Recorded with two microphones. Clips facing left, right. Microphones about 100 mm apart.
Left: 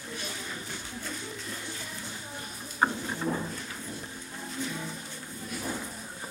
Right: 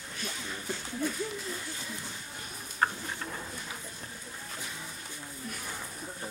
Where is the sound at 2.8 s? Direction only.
15° left (ahead or behind).